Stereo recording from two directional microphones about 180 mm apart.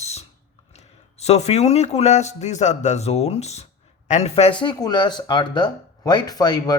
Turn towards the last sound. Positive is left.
turn(degrees=25)  # may be behind; listen again after turning